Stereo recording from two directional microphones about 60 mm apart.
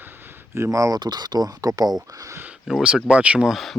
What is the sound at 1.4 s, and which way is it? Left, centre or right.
Speech, right.